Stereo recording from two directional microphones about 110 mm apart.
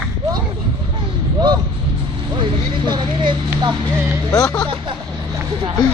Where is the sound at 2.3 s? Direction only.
45° right (ahead or behind).